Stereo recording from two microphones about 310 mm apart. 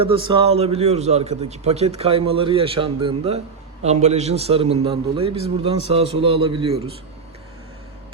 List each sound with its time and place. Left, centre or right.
0.0 s a man's voice: centre